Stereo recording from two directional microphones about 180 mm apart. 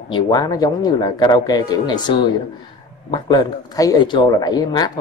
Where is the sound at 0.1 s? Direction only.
20° left (ahead or behind).